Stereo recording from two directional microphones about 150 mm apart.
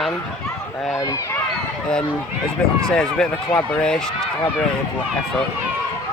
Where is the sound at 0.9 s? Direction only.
20° left (ahead or behind).